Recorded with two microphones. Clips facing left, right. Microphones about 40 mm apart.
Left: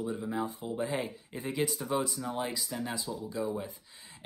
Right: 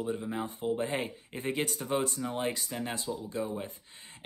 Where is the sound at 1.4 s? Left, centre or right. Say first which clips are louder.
Even; right.